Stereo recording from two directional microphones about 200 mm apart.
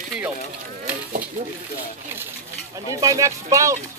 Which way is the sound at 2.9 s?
15° right (ahead or behind).